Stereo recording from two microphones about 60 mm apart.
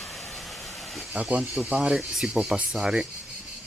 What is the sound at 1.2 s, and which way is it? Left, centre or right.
Speech, right.